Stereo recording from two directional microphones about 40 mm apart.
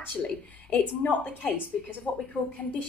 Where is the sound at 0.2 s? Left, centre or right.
Left.